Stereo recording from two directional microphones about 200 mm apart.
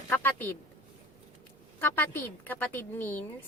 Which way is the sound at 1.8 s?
10° left (ahead or behind).